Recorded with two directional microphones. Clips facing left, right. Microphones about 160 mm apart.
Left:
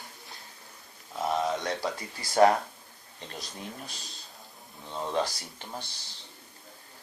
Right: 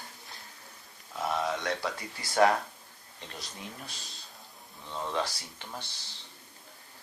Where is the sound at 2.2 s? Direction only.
30° left (ahead or behind).